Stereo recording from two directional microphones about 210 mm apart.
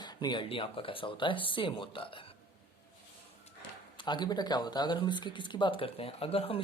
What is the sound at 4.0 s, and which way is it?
Speech, 20° left (ahead or behind).